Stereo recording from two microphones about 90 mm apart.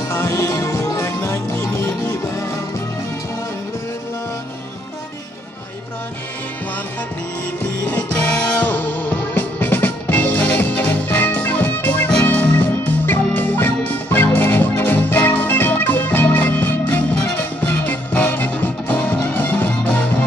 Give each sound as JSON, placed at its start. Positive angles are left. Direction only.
{"t": 0.1, "sound": "music", "side_deg": 30}
{"t": 7.9, "sound": "music", "side_deg": 15}